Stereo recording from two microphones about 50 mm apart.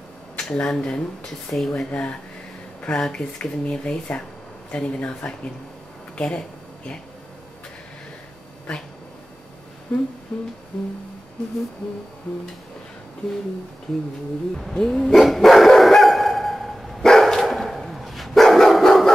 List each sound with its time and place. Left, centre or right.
0.4 s speech: centre
9.9 s speech: left
10.3 s music: centre
14.8 s dog: centre